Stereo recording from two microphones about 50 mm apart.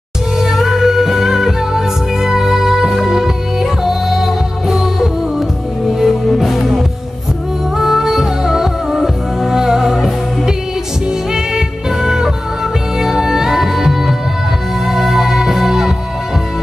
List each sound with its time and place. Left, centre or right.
0.4 s music: centre